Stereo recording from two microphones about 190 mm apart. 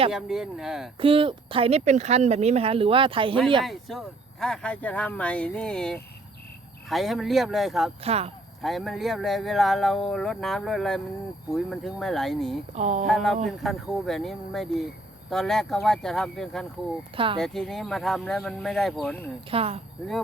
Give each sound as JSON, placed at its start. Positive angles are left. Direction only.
{"t": 0.1, "sound": "speech", "side_deg": 0}
{"t": 0.9, "sound": "speech", "side_deg": -30}
{"t": 3.6, "sound": "speech", "side_deg": 0}
{"t": 8.0, "sound": "speech", "side_deg": -35}
{"t": 8.6, "sound": "speech", "side_deg": 0}
{"t": 12.7, "sound": "speech", "side_deg": -40}
{"t": 13.1, "sound": "speech", "side_deg": 0}
{"t": 17.2, "sound": "speech", "side_deg": -25}
{"t": 17.4, "sound": "speech", "side_deg": 0}
{"t": 19.5, "sound": "speech", "side_deg": -30}